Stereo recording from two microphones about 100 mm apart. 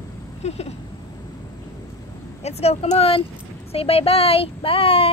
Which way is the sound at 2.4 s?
90° left.